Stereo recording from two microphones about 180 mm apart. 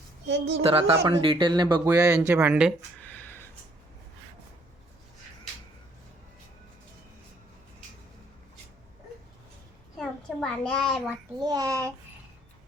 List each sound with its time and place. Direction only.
0.3 s a woman's voice: 75° right (ahead or behind)
0.6 s speech: 30° right (ahead or behind); by 2.7 s 5° right (ahead or behind)
3.0 s a sound: 10° left (ahead or behind)
10.0 s a child's voice: 5° left (ahead or behind)
11.4 s speech: 20° right (ahead or behind)